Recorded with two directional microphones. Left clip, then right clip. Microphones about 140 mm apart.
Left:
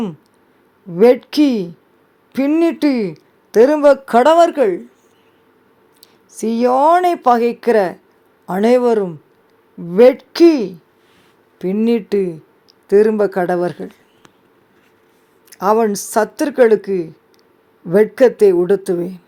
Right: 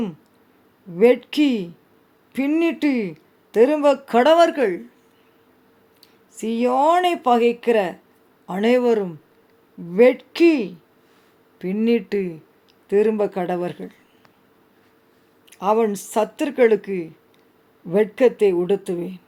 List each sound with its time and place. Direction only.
0.9 s speech: 40° left (ahead or behind)
6.4 s a woman's voice: 35° left (ahead or behind)
11.6 s a woman's voice: 25° left (ahead or behind); by 13.9 s 45° left (ahead or behind)
15.5 s a woman's voice: 30° left (ahead or behind)